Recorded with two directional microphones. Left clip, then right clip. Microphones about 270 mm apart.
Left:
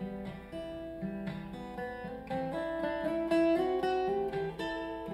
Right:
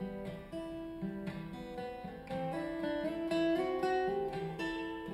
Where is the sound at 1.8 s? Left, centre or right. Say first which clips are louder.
Left 3 dB; right.